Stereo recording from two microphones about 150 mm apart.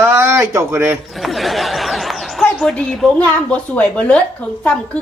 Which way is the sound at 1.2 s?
Centre (ahead or behind).